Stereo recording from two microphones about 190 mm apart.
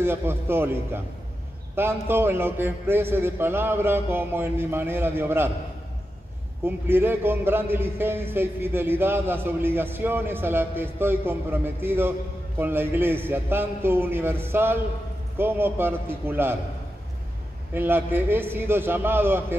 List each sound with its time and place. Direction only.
0.0 s a man's voice: 10° right (ahead or behind)
6.6 s a man's voice: 10° right (ahead or behind)
17.7 s a man's voice: 10° right (ahead or behind)